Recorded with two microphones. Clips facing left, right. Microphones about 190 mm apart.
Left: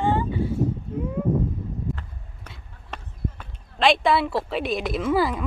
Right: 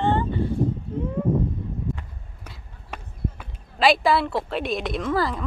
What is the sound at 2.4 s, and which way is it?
Speech, 5° right (ahead or behind).